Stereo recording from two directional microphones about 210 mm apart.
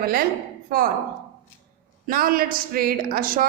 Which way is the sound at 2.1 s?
45° right (ahead or behind).